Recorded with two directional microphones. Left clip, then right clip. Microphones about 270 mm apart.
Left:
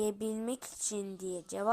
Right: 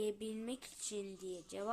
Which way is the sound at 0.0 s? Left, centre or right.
Left.